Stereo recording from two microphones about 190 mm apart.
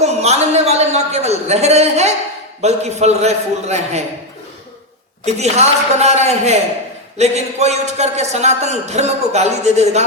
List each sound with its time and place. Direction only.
0.0 s a man's voice: 35° right (ahead or behind)
5.2 s a man's voice: 35° right (ahead or behind)